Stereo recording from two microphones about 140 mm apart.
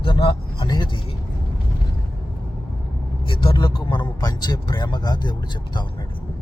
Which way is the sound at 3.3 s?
35° left (ahead or behind).